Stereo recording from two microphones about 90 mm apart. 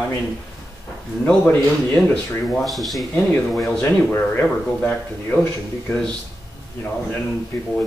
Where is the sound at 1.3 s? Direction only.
15° left (ahead or behind).